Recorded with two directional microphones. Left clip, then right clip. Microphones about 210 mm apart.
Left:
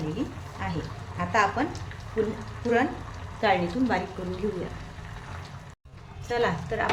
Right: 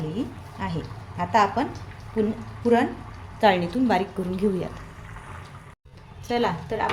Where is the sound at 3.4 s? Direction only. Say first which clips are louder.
Right 4 dB; 50° right (ahead or behind).